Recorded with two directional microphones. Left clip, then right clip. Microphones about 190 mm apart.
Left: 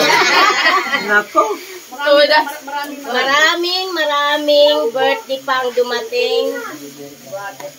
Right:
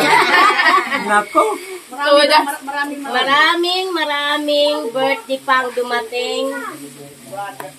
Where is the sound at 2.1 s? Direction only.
20° right (ahead or behind).